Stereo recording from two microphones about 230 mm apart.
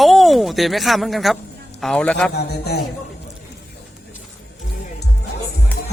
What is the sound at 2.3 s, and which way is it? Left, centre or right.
Speech, left.